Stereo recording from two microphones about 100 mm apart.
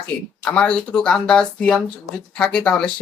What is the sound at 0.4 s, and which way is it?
Speech, 10° left (ahead or behind).